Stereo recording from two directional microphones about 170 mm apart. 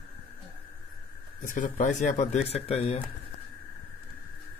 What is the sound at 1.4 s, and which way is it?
Speech, 50° left (ahead or behind).